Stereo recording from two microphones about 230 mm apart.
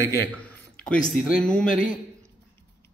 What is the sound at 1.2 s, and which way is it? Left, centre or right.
Speech, centre.